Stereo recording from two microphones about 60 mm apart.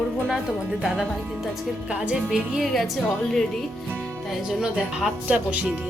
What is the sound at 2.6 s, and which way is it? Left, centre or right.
Speech, centre.